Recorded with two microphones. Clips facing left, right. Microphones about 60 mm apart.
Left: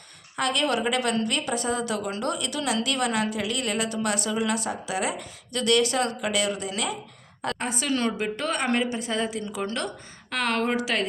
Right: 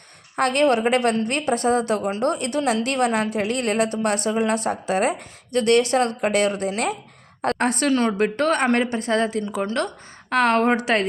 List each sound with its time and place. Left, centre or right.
0.3 s a woman's voice: right
7.6 s a woman's voice: right
7.9 s a woman's voice: right
8.1 s a woman's voice: right
9.6 s a woman's voice: right